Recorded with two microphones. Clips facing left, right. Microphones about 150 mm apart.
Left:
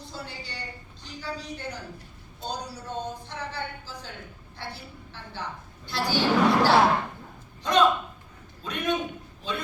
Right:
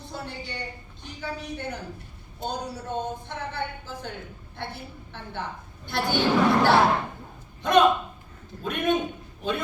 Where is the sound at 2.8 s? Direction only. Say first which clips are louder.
Right 3 dB; 55° right (ahead or behind).